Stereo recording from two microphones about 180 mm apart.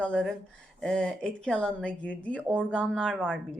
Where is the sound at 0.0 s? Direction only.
5° left (ahead or behind).